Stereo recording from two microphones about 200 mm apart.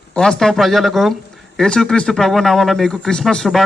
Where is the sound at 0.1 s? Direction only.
5° left (ahead or behind).